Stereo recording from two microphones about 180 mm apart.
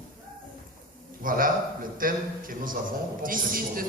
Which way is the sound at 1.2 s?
50° right (ahead or behind).